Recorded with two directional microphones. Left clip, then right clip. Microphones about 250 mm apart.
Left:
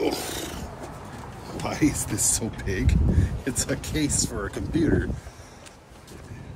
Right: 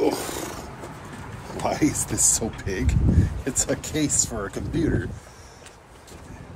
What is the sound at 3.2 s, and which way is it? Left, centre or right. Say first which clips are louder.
Speech: right 2 dB; centre.